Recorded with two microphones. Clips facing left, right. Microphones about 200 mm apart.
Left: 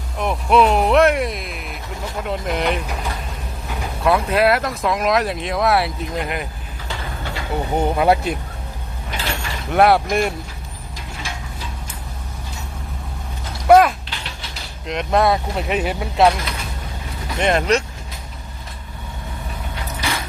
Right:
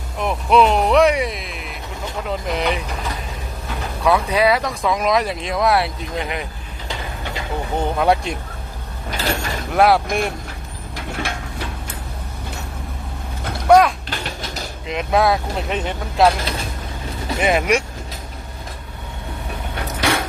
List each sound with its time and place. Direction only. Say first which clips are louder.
0.2 s speech: even; centre (ahead or behind)
4.0 s speech: even; centre (ahead or behind)
7.8 s speech: left 1 dB; 5° left (ahead or behind)
9.0 s mechanisms: right 4 dB; 40° right (ahead or behind)
9.7 s speech: left 1 dB; centre (ahead or behind)
10.9 s a sound: right 6 dB; 65° right (ahead or behind)
13.7 s speech: left 1 dB; 5° left (ahead or behind)
14.1 s a sound: right 6 dB; 45° right (ahead or behind)
14.8 s speech: even; centre (ahead or behind)
17.4 s speech: even; 5° right (ahead or behind)
19.7 s a sound: right 6 dB; 70° right (ahead or behind)